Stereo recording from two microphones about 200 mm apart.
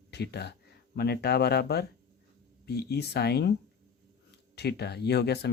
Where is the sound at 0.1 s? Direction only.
55° left (ahead or behind).